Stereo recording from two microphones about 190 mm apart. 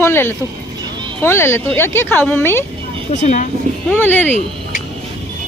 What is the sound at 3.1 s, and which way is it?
Speech, 40° left (ahead or behind).